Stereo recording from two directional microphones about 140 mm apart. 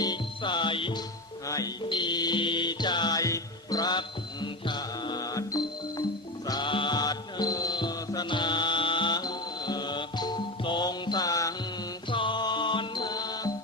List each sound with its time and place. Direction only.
0.0 s music: 30° left (ahead or behind)
1.5 s music: 25° left (ahead or behind)
12.1 s music: 35° left (ahead or behind)